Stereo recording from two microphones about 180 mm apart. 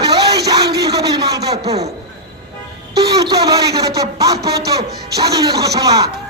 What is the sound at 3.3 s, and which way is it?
Speech, 20° right (ahead or behind).